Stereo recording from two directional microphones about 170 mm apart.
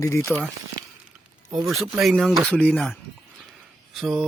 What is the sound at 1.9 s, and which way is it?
Speech, centre (ahead or behind).